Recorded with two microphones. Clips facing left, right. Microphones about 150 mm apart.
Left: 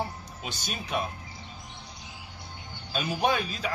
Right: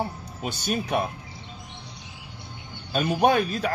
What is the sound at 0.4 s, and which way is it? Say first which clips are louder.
Speech: right 10 dB; 55° right (ahead or behind).